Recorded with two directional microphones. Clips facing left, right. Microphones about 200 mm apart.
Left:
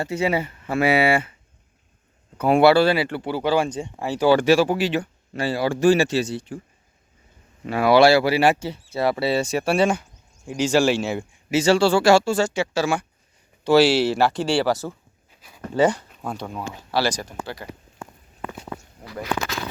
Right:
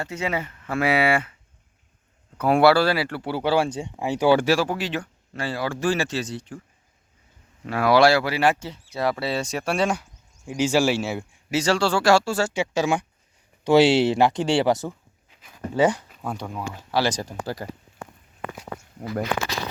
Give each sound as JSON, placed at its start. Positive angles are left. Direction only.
{"t": 0.0, "sound": "speech", "side_deg": 10}
{"t": 2.8, "sound": "speech", "side_deg": 0}
{"t": 3.2, "sound": "speech", "side_deg": 15}
{"t": 3.7, "sound": "speech", "side_deg": -15}
{"t": 4.4, "sound": "speech", "side_deg": 5}
{"t": 7.7, "sound": "speech", "side_deg": 0}
{"t": 10.4, "sound": "speech", "side_deg": -10}
{"t": 15.4, "sound": "speech", "side_deg": -10}
{"t": 17.2, "sound": "speech", "side_deg": -35}